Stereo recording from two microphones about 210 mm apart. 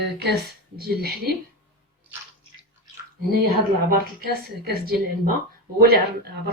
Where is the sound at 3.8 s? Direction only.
45° right (ahead or behind).